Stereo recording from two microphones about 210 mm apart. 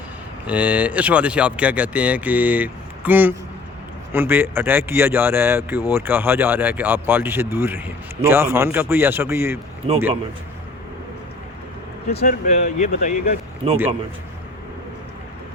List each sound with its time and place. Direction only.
0.4 s speech: 5° right (ahead or behind)
12.2 s speech: 45° left (ahead or behind)
13.6 s a man's voice: 25° right (ahead or behind)